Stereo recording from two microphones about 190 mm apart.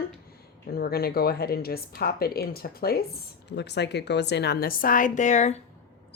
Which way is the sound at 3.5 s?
65° left (ahead or behind).